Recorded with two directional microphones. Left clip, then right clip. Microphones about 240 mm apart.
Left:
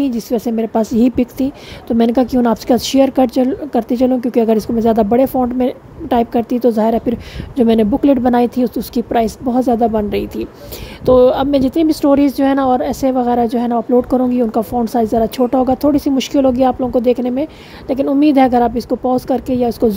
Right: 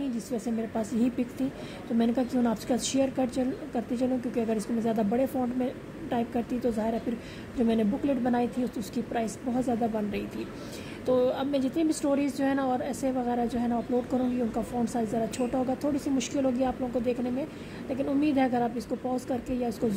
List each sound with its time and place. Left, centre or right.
0.0 s speech: left